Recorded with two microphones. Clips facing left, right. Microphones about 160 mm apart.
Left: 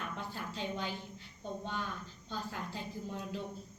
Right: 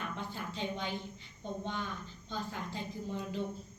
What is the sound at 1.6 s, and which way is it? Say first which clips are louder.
A woman's voice: right 1 dB; 5° left (ahead or behind).